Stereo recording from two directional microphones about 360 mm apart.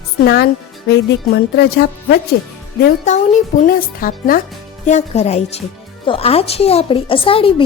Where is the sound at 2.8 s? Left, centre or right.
Centre.